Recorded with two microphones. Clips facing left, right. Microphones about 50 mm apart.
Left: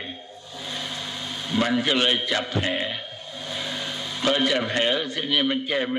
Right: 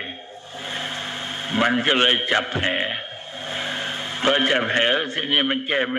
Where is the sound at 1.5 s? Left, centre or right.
Right.